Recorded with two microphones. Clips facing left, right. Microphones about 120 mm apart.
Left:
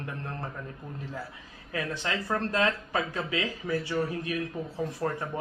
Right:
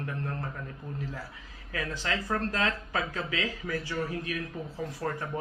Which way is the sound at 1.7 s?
25° left (ahead or behind).